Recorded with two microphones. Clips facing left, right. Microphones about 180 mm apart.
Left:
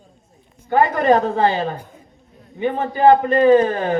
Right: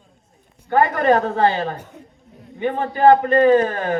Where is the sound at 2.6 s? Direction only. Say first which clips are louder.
Left 1 dB; 20° left (ahead or behind).